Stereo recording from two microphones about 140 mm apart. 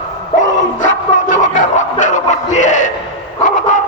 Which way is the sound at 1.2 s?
60° left (ahead or behind).